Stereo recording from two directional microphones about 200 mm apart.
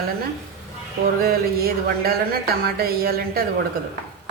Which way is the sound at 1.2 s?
50° right (ahead or behind).